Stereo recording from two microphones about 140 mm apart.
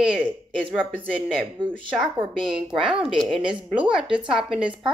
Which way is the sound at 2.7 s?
5° right (ahead or behind).